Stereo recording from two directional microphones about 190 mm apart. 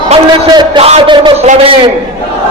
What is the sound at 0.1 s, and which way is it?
A man's voice, 25° right (ahead or behind).